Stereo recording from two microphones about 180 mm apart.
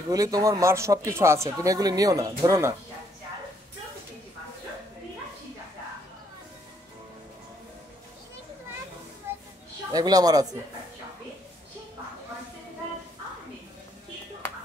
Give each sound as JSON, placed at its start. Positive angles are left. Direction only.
{"t": 0.1, "sound": "speech", "side_deg": -20}
{"t": 9.3, "sound": "a sound", "side_deg": -15}
{"t": 9.9, "sound": "speech", "side_deg": -20}